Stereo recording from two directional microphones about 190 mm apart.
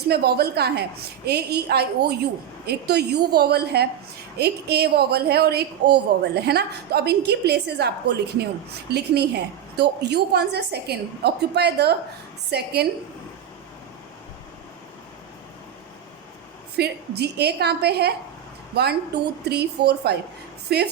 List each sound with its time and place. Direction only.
0.1 s a woman's voice: 55° right (ahead or behind)
16.7 s a woman's voice: 60° right (ahead or behind)